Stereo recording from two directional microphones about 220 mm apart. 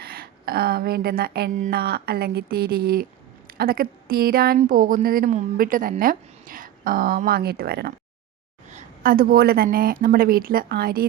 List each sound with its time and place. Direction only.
0.0 s speech: 45° right (ahead or behind)